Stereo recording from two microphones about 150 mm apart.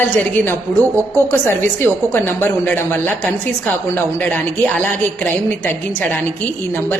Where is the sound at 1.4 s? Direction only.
15° left (ahead or behind).